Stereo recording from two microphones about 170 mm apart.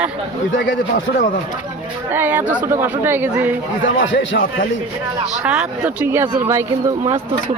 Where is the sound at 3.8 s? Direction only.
90° left.